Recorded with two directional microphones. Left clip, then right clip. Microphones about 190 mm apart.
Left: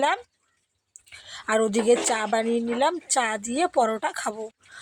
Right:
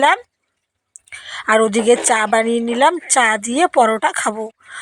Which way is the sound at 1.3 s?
25° right (ahead or behind).